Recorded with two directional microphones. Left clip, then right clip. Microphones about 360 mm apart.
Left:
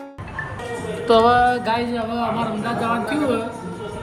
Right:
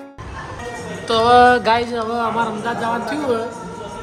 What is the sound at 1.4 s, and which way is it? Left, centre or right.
Music, right.